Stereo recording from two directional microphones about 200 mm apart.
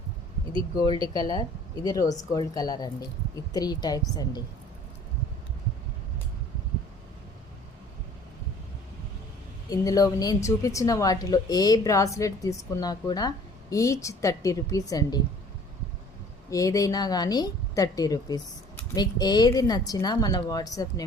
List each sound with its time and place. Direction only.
0.5 s speech: 20° left (ahead or behind)
9.6 s a woman's voice: 15° left (ahead or behind)
16.5 s speech: 15° left (ahead or behind)